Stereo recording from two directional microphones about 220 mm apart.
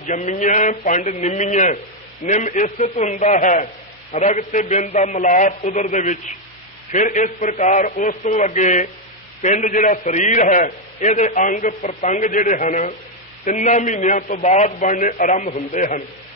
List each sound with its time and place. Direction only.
0.0 s a man's voice: 35° left (ahead or behind)